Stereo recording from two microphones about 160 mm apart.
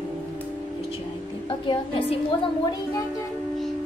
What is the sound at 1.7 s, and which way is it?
Speech, 30° left (ahead or behind).